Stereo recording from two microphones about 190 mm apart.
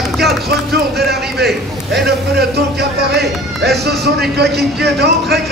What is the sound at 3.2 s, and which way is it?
A man's voice, 55° right (ahead or behind).